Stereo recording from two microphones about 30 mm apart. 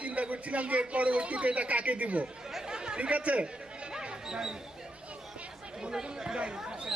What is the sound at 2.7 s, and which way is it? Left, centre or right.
Chatter, right.